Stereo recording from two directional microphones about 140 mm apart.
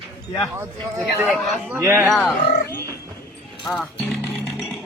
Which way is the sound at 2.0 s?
Centre (ahead or behind).